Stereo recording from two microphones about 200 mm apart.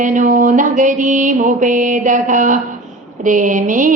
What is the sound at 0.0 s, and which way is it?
Mantra, 40° right (ahead or behind).